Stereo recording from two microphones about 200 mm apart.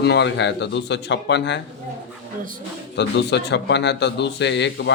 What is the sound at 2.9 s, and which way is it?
A man's voice, 60° left (ahead or behind).